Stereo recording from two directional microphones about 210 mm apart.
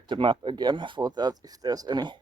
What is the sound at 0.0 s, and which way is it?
Speech, 25° right (ahead or behind).